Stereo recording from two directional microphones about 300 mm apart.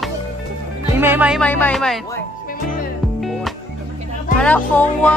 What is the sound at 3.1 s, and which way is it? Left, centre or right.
Music, centre.